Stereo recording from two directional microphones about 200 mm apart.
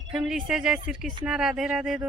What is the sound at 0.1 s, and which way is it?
Speech, 5° right (ahead or behind).